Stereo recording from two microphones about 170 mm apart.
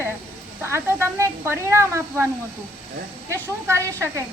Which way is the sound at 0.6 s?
15° right (ahead or behind).